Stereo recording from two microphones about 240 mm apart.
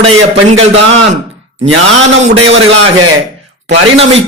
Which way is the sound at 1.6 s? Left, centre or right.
Right.